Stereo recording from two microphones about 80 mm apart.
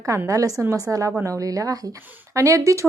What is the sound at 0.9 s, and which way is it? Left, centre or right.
Speech, centre.